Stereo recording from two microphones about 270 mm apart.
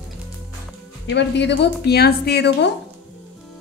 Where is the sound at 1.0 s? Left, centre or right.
Left.